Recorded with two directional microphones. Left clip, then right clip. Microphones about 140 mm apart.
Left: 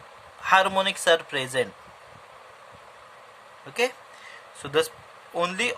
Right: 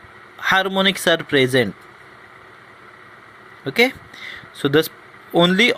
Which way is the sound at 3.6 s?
35° right (ahead or behind).